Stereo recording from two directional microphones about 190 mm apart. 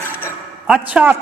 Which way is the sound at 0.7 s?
5° right (ahead or behind).